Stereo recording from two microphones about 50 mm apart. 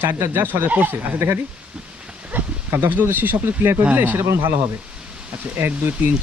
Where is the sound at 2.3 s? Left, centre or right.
Right.